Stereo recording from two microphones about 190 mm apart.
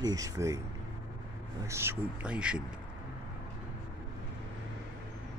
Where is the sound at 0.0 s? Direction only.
20° right (ahead or behind).